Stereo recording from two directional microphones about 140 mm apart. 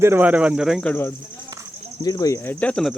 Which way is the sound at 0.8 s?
15° left (ahead or behind).